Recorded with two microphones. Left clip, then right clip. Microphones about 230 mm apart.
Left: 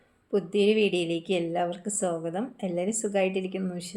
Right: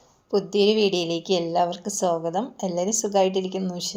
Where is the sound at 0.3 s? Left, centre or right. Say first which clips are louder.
Right 3 dB; centre.